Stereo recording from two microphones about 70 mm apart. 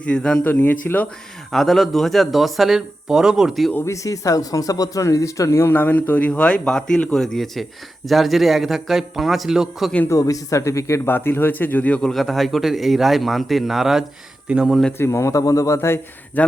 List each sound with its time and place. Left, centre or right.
0.0 s a man's voice: centre
0.4 s a man's voice: left
1.5 s speech: centre
3.8 s speech: left
5.7 s a man's voice: left; by 9.9 s centre
10.2 s speech: left
11.0 s a man's voice: left
11.9 s speech: centre
14.9 s speech: left